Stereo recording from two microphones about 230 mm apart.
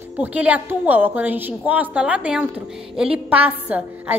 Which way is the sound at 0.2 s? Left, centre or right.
Centre.